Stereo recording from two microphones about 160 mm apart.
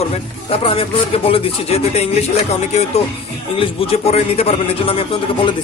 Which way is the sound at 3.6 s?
40° left (ahead or behind).